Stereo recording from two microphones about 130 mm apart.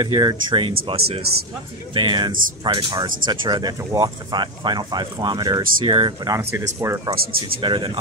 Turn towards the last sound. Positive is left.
turn(degrees=-40)  # may be behind; listen again after turning